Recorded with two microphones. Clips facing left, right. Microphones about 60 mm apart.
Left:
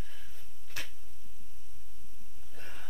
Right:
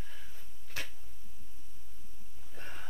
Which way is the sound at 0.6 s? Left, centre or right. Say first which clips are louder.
Right 1 dB; centre.